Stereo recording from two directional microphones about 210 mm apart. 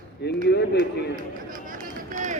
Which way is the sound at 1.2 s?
40° right (ahead or behind).